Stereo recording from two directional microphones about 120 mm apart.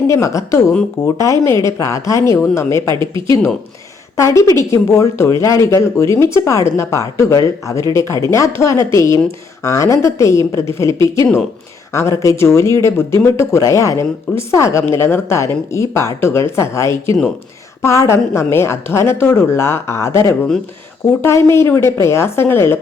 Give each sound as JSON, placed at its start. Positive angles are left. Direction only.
{"t": 0.1, "sound": "speech", "side_deg": 25}
{"t": 2.9, "sound": "speech", "side_deg": -45}
{"t": 4.2, "sound": "speech", "side_deg": 25}